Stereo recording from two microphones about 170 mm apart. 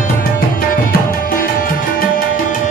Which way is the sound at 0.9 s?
60° left (ahead or behind).